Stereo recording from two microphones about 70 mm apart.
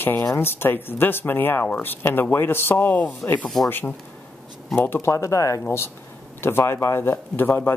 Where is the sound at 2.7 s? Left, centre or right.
Left.